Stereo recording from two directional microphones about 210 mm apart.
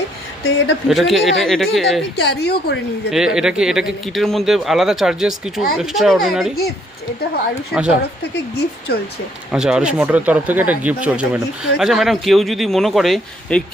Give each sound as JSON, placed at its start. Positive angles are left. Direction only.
{"t": 0.9, "sound": "speech", "side_deg": 0}
{"t": 2.1, "sound": "a woman's voice", "side_deg": 50}
{"t": 3.1, "sound": "speech", "side_deg": -5}
{"t": 7.7, "sound": "speech", "side_deg": -5}
{"t": 8.9, "sound": "a woman's voice", "side_deg": 50}
{"t": 9.5, "sound": "speech", "side_deg": -5}